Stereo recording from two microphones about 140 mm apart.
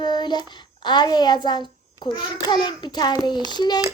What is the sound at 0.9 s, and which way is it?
A child's voice, 30° left (ahead or behind).